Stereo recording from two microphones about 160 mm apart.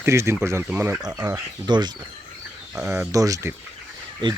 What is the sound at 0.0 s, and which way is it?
Speech, 15° right (ahead or behind).